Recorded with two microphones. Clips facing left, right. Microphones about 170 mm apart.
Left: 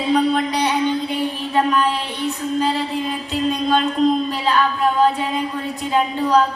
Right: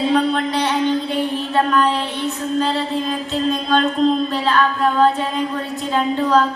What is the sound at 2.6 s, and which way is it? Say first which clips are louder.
Mantra: right 1 dB; 15° left (ahead or behind).